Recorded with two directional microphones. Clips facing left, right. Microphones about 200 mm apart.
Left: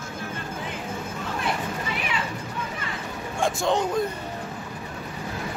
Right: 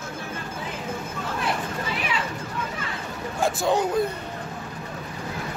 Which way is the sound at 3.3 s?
5° right (ahead or behind).